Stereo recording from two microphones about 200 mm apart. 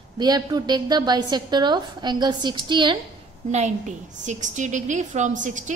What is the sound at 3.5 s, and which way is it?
A woman's voice, 35° right (ahead or behind).